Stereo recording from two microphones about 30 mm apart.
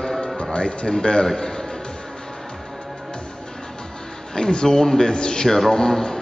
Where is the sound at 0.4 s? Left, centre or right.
Left.